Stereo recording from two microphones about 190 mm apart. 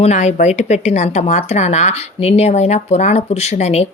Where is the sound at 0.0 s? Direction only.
35° left (ahead or behind).